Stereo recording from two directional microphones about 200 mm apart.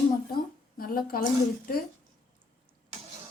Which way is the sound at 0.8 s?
45° left (ahead or behind).